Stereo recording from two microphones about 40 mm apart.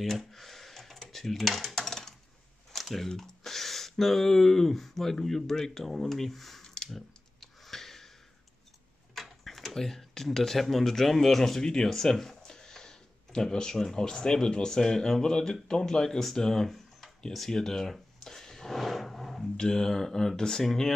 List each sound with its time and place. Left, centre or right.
0.0 s a sound: centre
1.1 s dishes: centre
2.7 s typing: centre
3.1 s speech: centre
6.9 s clicking: centre
9.1 s speech: centre
18.8 s a sound: centre
19.5 s speech: centre